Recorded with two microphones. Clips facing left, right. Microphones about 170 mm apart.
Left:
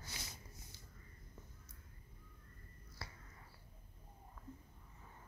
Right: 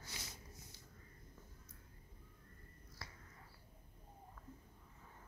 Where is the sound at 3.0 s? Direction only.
30° left (ahead or behind).